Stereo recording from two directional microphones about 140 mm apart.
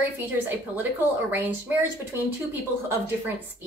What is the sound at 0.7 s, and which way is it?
A woman's voice, 15° right (ahead or behind).